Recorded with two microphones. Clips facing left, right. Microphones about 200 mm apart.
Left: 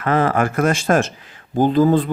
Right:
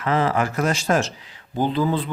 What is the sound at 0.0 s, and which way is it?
Speech, 55° left (ahead or behind).